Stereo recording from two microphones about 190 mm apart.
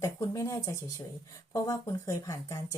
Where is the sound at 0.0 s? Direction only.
15° left (ahead or behind).